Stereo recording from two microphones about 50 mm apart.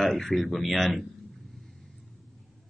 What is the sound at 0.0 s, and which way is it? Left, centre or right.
Speech, centre.